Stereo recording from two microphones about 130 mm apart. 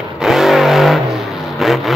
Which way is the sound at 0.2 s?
5° right (ahead or behind).